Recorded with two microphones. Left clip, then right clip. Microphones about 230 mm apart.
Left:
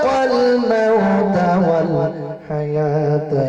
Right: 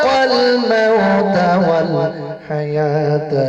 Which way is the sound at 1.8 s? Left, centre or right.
Right.